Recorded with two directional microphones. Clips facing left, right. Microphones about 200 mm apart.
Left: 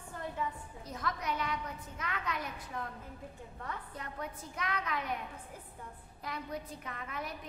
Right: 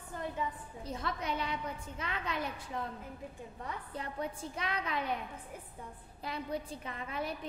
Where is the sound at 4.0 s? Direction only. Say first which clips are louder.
Right 4 dB; 30° right (ahead or behind).